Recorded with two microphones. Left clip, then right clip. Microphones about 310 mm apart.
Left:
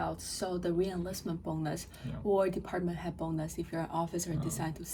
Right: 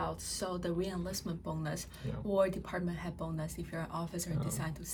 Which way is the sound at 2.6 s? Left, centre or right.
Centre.